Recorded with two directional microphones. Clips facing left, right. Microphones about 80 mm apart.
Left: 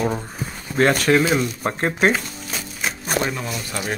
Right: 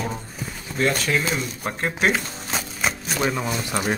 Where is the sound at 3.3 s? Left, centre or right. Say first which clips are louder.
Right 3 dB; right.